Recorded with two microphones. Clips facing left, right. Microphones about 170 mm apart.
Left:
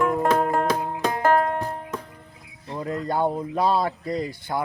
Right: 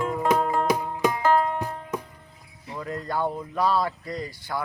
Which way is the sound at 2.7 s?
25° left (ahead or behind).